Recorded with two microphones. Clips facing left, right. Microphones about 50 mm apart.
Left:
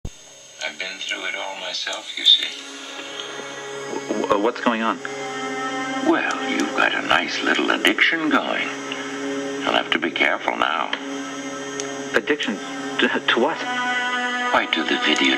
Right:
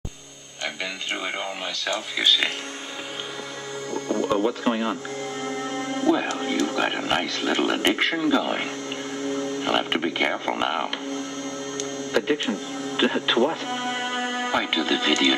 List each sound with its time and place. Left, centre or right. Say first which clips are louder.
2.1 s speech: left 2 dB; right
3.9 s speech: left 3 dB; left
5.4 s music: left 4 dB; left
6.3 s speech: left 3 dB; left
9.2 s music: even; left
9.6 s speech: left 4 dB; left
12.1 s speech: left 2 dB; left
13.4 s speech: left 2 dB; left